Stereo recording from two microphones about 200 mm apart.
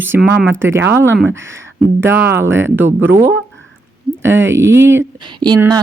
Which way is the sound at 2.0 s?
10° right (ahead or behind).